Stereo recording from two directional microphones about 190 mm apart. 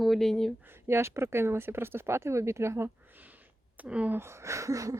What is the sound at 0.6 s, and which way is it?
Speech, 10° right (ahead or behind).